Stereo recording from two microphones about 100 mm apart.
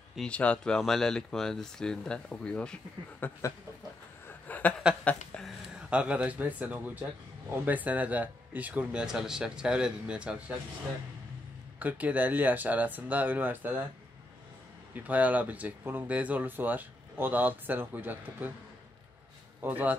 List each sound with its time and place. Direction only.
0.3 s speech: 10° left (ahead or behind)
4.3 s a sound: 15° left (ahead or behind)
5.8 s speech: 10° right (ahead or behind)
11.8 s speech: 15° right (ahead or behind)
15.0 s speech: 15° right (ahead or behind)
19.6 s speech: 15° right (ahead or behind)